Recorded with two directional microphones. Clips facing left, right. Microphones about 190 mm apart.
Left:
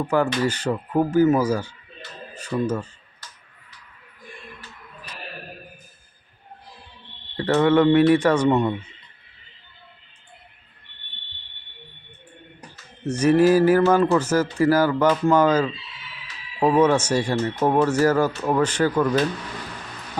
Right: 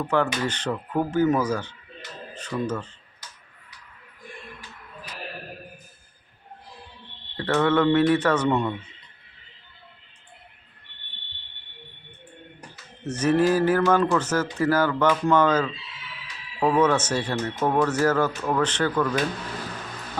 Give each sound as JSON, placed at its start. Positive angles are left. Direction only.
{"t": 0.0, "sound": "speech", "side_deg": 10}
{"t": 7.3, "sound": "speech", "side_deg": 15}
{"t": 13.1, "sound": "speech", "side_deg": 10}